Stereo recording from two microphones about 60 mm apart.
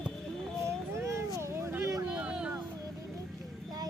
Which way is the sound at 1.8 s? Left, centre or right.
Right.